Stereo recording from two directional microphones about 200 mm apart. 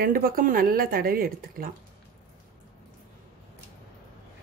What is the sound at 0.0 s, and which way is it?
Speech, 45° right (ahead or behind).